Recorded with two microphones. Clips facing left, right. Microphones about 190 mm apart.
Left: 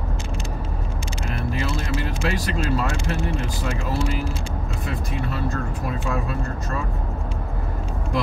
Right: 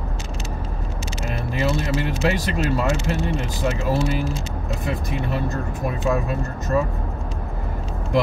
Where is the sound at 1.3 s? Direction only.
20° right (ahead or behind).